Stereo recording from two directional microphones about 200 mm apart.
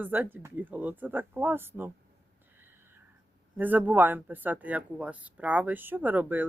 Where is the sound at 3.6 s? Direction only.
10° right (ahead or behind).